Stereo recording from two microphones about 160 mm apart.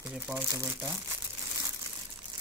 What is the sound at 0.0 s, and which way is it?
Speech, 10° right (ahead or behind).